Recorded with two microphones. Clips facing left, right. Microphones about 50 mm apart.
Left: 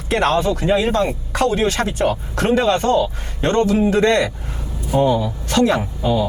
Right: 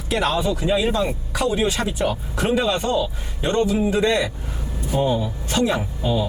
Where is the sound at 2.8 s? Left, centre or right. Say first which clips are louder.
Left 5 dB; left.